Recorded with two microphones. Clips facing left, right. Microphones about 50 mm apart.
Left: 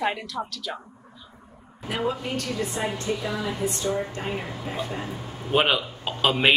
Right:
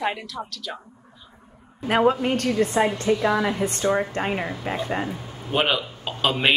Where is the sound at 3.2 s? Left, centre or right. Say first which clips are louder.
Right 8 dB; right.